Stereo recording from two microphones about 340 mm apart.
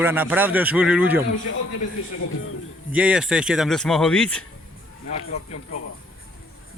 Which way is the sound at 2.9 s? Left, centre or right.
Centre.